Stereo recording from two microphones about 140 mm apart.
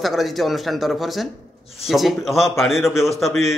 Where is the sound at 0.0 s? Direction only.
Centre (ahead or behind).